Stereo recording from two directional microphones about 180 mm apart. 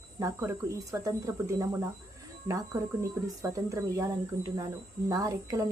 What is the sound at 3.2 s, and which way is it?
Speech, 20° right (ahead or behind).